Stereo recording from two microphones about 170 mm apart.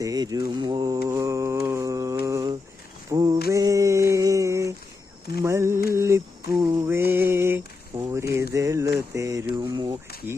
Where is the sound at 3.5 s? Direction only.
20° right (ahead or behind).